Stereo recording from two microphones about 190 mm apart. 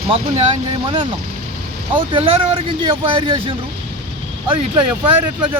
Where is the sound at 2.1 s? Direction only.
30° right (ahead or behind).